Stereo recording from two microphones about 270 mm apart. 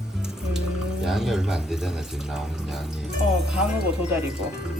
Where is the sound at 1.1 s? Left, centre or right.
Centre.